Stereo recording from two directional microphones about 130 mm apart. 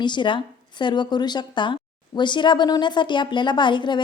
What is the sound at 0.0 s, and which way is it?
A woman's voice, 35° left (ahead or behind).